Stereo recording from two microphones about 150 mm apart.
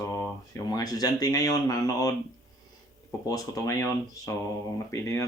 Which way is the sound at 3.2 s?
25° left (ahead or behind).